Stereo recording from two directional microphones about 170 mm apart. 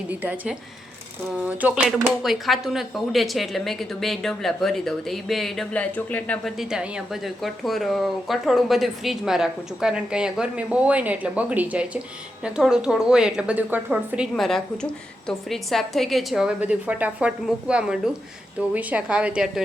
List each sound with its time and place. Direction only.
0.1 s a woman's voice: 10° right (ahead or behind); by 6.5 s 10° left (ahead or behind)
6.6 s a woman's voice: 5° right (ahead or behind)